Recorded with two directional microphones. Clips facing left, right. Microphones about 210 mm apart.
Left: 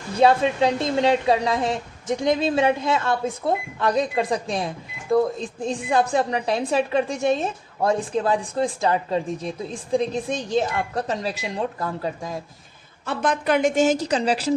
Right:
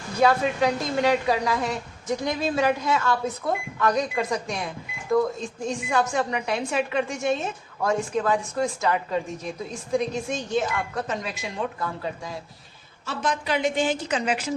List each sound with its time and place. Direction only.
0.2 s a woman's voice: 25° left (ahead or behind); by 12.4 s 45° left (ahead or behind)
13.1 s a woman's voice: 55° left (ahead or behind); by 14.5 s 35° left (ahead or behind)